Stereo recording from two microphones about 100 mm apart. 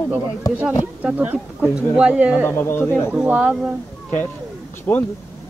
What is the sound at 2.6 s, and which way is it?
Speech, 25° left (ahead or behind).